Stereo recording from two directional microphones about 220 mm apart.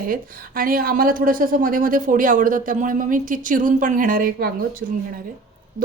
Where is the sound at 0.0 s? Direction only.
40° right (ahead or behind).